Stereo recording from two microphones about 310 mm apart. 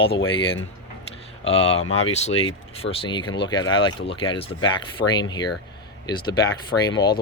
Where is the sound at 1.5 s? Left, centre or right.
Centre.